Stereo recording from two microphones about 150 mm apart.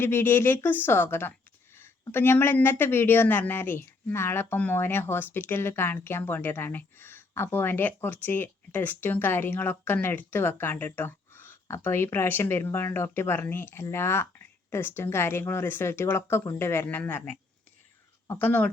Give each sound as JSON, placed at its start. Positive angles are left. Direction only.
{"t": 0.0, "sound": "a woman's voice", "side_deg": 15}